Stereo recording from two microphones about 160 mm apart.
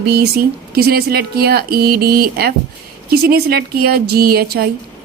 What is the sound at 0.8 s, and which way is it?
A woman's voice, 80° right.